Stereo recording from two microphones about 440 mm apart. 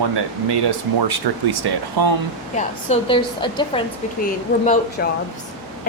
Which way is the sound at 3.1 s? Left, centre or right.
Centre.